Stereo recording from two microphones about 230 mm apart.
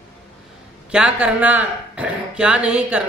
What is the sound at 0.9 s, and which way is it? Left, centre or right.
A woman's voice, centre.